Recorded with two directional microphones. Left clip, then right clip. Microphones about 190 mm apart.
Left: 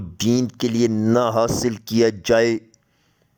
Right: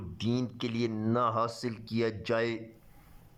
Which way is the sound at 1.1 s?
35° left (ahead or behind).